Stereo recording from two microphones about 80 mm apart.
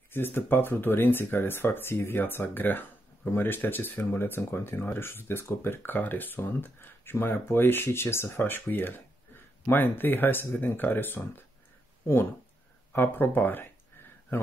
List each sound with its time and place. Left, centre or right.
0.1 s speech: left